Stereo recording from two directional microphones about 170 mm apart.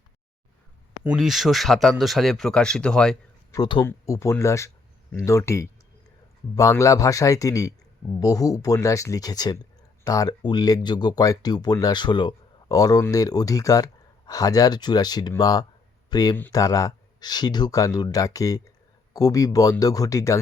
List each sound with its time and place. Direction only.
1.1 s speech: centre (ahead or behind)
3.5 s speech: 25° left (ahead or behind)